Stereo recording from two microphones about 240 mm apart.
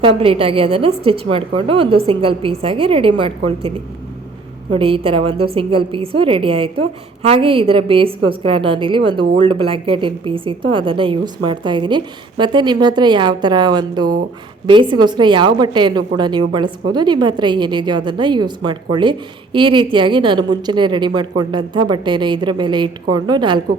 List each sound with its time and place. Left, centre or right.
0.2 s a woman's voice: right
4.7 s a woman's voice: right